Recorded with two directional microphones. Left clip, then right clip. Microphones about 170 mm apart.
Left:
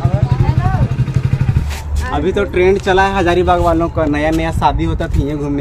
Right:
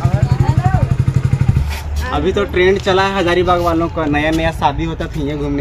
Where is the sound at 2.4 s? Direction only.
20° left (ahead or behind).